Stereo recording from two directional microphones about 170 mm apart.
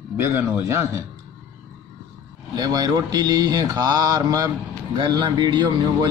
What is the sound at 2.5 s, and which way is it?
Speech, 25° right (ahead or behind).